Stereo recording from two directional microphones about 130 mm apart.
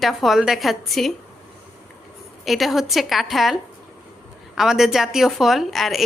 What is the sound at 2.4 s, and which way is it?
A woman's voice, centre (ahead or behind).